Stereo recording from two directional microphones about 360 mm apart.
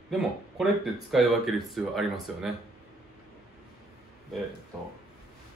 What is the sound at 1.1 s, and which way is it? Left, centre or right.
Speech, centre.